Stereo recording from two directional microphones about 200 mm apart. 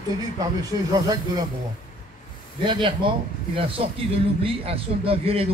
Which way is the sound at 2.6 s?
25° right (ahead or behind).